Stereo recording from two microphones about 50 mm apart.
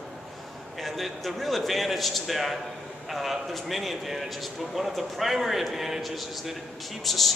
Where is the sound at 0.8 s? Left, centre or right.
Centre.